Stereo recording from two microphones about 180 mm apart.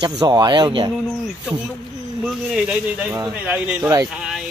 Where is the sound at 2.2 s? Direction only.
5° right (ahead or behind).